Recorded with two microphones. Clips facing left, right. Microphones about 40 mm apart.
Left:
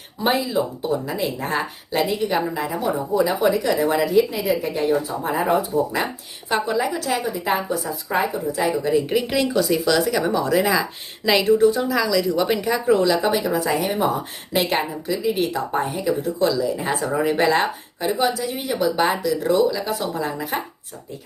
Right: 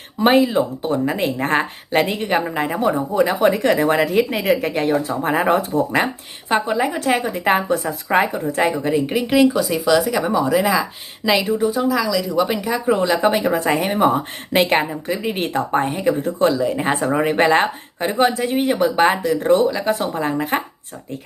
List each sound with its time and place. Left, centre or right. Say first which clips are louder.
0.2 s speech: right 6 dB; right
6.5 s speech: right 3 dB; right
7.3 s speech: right 5 dB; right
8.8 s speech: right 1 dB; centre
12.9 s speech: right 2 dB; right